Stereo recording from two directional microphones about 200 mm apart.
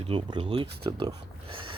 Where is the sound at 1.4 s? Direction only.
25° right (ahead or behind).